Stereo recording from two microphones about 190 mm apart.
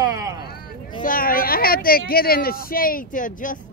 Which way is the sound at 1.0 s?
50° left (ahead or behind).